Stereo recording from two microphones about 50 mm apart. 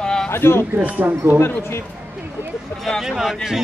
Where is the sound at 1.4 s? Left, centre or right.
Left.